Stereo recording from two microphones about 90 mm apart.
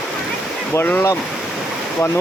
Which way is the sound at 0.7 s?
20° left (ahead or behind).